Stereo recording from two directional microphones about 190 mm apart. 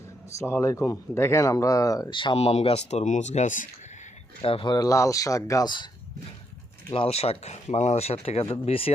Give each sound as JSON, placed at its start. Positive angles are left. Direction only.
{"t": 0.3, "sound": "speech", "side_deg": 15}
{"t": 4.4, "sound": "speech", "side_deg": 25}
{"t": 6.9, "sound": "speech", "side_deg": 30}